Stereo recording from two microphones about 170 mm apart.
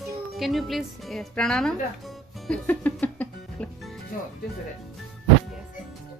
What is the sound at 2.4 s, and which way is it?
Music, 10° left (ahead or behind).